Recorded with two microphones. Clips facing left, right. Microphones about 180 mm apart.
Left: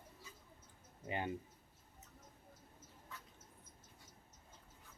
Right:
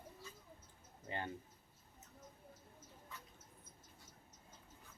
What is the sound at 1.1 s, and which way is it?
Speech, 15° left (ahead or behind).